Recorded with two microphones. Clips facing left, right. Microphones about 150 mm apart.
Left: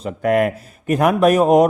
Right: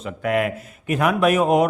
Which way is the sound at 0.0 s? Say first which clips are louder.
Left 5 dB; 40° left (ahead or behind).